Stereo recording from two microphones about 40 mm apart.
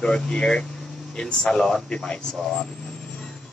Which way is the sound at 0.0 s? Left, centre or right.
Centre.